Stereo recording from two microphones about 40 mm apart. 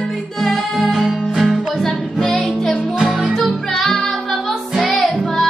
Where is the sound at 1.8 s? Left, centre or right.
Centre.